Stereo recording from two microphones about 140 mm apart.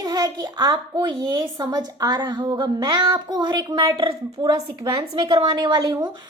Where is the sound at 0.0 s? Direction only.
25° right (ahead or behind).